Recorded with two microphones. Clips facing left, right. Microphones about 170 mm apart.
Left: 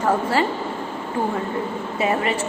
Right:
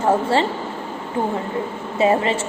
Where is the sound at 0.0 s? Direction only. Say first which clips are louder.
Right 2 dB; 25° right (ahead or behind).